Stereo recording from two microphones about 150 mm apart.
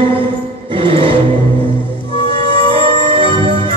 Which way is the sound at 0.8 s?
35° right (ahead or behind).